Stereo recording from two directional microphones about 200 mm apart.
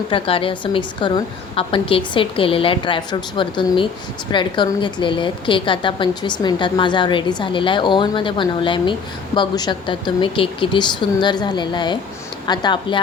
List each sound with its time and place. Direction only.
0.1 s a woman's voice: 25° left (ahead or behind)